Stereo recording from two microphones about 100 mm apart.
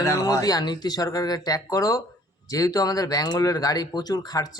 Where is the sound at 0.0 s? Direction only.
35° left (ahead or behind).